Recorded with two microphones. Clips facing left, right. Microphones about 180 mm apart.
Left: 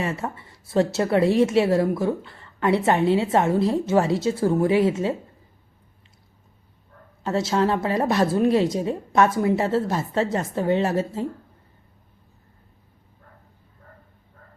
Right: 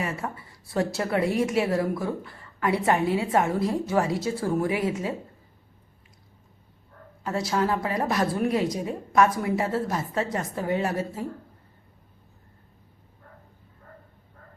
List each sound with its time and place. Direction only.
0.0 s a woman's voice: 25° left (ahead or behind)
7.3 s a woman's voice: 25° left (ahead or behind)